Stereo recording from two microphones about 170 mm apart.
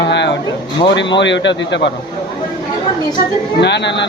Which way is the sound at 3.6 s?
90° left.